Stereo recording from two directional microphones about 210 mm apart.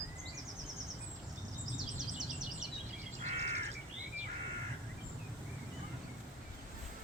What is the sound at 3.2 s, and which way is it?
Crow, 30° right (ahead or behind).